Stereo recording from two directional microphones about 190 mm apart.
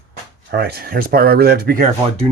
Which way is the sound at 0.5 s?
55° right (ahead or behind).